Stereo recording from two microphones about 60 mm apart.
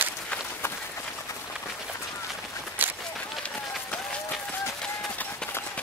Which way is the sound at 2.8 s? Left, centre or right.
Right.